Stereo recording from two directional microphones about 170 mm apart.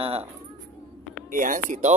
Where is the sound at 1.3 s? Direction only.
50° right (ahead or behind).